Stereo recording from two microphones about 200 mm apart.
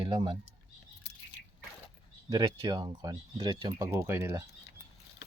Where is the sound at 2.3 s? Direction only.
20° right (ahead or behind).